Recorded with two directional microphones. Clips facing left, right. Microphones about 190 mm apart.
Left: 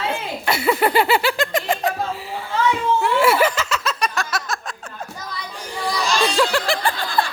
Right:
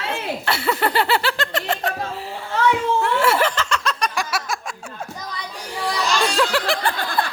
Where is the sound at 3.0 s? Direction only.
10° left (ahead or behind).